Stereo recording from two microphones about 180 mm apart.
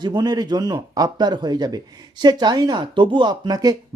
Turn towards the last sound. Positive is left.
turn(degrees=-20)  # may be behind; listen again after turning